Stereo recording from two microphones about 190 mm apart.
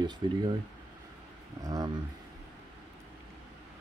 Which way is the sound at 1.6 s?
20° right (ahead or behind).